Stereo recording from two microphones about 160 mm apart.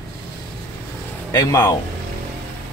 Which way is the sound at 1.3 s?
20° left (ahead or behind).